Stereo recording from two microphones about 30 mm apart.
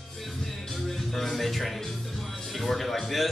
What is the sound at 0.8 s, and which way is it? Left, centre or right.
Speech, centre.